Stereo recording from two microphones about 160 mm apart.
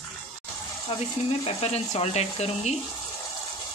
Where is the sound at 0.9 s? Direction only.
35° left (ahead or behind).